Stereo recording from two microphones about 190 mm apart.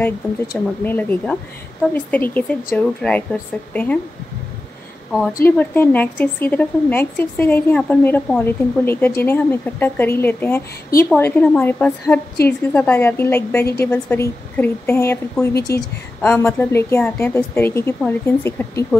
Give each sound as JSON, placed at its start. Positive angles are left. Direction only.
{"t": 0.5, "sound": "a woman's voice", "side_deg": 10}
{"t": 5.4, "sound": "a woman's voice", "side_deg": 10}
{"t": 15.5, "sound": "speech", "side_deg": 55}
{"t": 16.2, "sound": "a woman's voice", "side_deg": 10}